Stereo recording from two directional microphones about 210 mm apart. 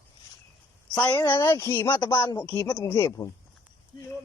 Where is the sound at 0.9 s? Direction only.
10° left (ahead or behind).